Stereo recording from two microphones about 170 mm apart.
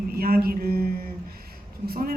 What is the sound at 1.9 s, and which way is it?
Speech, 60° right (ahead or behind).